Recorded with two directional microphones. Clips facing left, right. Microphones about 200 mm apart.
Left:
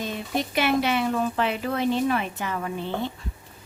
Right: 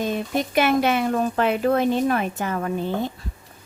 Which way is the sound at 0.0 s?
50° right (ahead or behind).